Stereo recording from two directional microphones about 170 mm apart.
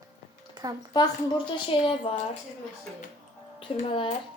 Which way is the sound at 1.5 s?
30° left (ahead or behind).